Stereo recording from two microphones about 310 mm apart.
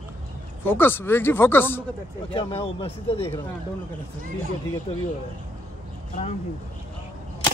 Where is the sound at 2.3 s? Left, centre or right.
Centre.